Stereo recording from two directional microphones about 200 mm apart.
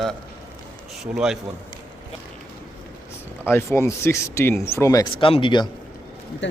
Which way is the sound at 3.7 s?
15° left (ahead or behind).